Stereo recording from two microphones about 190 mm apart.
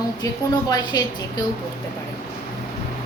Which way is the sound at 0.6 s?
20° left (ahead or behind).